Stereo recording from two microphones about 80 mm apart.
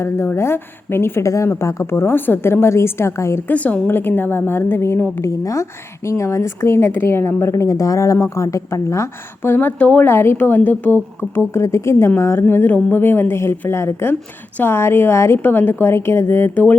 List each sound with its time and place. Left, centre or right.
0.3 s a woman's voice: left
3.5 s a woman's voice: centre
5.2 s a woman's voice: left
9.5 s a woman's voice: left